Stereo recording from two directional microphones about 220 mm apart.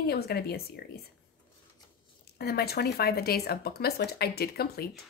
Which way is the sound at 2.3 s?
45° left (ahead or behind).